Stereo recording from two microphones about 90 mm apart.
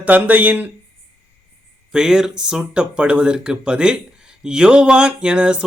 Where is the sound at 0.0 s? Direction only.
15° right (ahead or behind).